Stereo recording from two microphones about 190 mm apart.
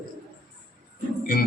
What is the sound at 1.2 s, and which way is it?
Music, 50° left (ahead or behind).